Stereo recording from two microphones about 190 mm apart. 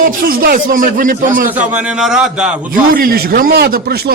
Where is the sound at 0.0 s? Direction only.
50° right (ahead or behind).